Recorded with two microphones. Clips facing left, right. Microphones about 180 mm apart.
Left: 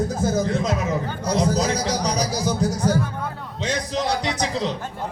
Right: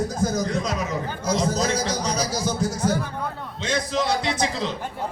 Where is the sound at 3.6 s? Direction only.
15° left (ahead or behind).